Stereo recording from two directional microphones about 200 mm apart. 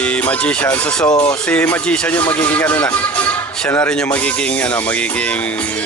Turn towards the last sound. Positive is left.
turn(degrees=10)  # may be behind; listen again after turning